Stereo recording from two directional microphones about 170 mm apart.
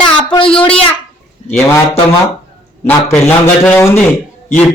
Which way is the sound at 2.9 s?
15° left (ahead or behind).